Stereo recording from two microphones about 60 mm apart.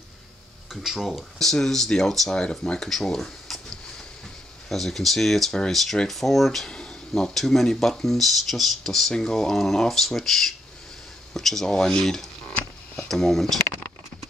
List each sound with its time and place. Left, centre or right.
0.8 s speech: centre
1.4 s speech: centre
4.6 s speech: centre
6.7 s speech: centre